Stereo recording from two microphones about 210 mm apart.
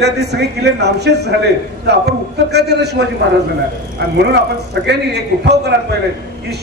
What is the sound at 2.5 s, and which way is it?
Speech, 50° right (ahead or behind).